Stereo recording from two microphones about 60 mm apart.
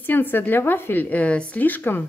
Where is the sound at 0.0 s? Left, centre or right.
Left.